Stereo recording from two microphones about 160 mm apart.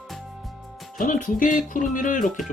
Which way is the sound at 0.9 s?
55° left (ahead or behind).